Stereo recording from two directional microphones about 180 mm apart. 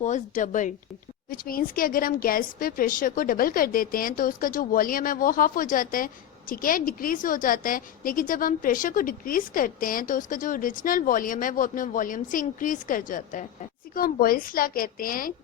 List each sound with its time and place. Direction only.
0.0 s a woman's voice: 45° left (ahead or behind)